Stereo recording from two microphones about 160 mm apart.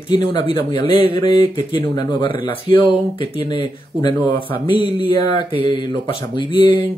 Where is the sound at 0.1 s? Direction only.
30° left (ahead or behind).